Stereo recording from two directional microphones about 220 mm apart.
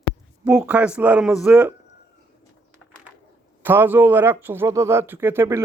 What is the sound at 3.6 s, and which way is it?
A man's voice, 10° right (ahead or behind).